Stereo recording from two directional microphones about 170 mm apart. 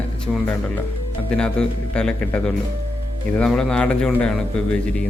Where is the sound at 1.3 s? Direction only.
5° left (ahead or behind).